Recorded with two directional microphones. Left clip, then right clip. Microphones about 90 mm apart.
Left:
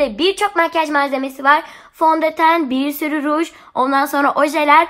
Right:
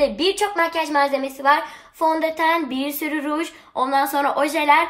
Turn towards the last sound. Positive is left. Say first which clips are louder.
# left 4 dB
turn(degrees=40)  # may be behind; listen again after turning